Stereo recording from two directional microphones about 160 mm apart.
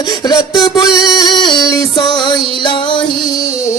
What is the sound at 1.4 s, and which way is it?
Music, 25° left (ahead or behind).